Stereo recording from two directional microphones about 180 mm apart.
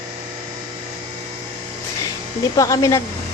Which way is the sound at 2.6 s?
15° left (ahead or behind).